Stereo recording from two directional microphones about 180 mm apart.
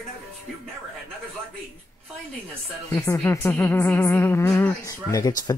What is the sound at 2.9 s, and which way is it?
Speech, 15° left (ahead or behind).